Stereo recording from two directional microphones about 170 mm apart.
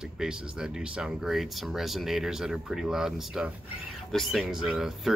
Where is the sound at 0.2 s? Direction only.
5° right (ahead or behind).